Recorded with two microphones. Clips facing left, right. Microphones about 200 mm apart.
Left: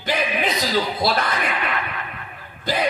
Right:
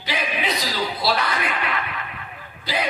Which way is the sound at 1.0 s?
50° left (ahead or behind).